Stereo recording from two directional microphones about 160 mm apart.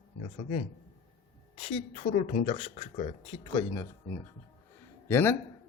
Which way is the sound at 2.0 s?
50° left (ahead or behind).